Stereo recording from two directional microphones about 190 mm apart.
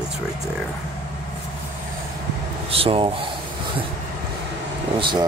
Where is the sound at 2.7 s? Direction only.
30° right (ahead or behind).